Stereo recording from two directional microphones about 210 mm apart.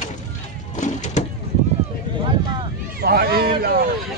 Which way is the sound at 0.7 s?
35° left (ahead or behind).